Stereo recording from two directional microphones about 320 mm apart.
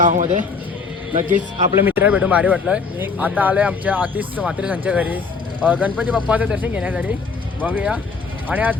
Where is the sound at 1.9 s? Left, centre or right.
Centre.